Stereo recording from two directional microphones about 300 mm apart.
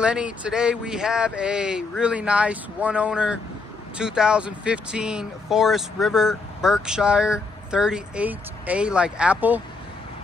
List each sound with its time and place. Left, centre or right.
0.0 s speech: centre